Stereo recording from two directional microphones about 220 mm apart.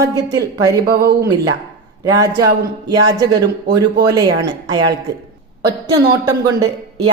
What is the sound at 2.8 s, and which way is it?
A woman's voice, 20° right (ahead or behind).